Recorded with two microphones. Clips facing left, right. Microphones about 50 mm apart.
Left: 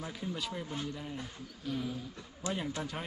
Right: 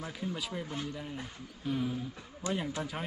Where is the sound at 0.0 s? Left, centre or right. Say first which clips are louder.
Right 1 dB; centre.